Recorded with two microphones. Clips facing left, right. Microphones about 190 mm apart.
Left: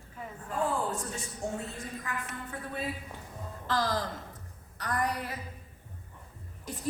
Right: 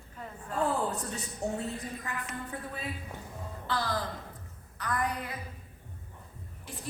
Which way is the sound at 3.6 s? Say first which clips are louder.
Left 3 dB; 40° left (ahead or behind).